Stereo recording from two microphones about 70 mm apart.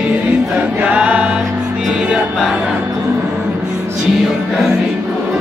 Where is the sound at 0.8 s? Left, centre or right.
Centre.